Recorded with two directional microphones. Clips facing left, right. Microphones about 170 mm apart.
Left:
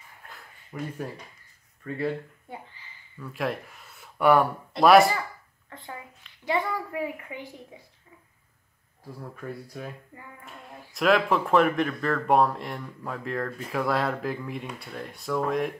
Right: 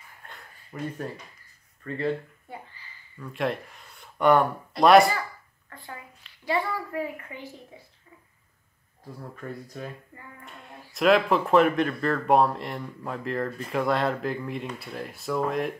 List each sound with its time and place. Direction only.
0.2 s a sound: centre (ahead or behind)
0.7 s speech: 5° right (ahead or behind)
1.8 s a child's voice: 10° left (ahead or behind)
3.2 s speech: centre (ahead or behind)
5.7 s a sound: 20° left (ahead or behind)
6.4 s a child's voice: 15° left (ahead or behind)
9.3 s speech: 10° left (ahead or behind)